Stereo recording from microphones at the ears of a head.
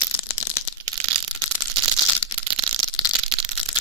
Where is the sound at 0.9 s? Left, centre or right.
Right.